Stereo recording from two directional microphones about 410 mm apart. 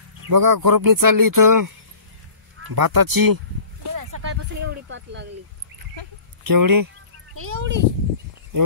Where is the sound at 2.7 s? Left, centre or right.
Right.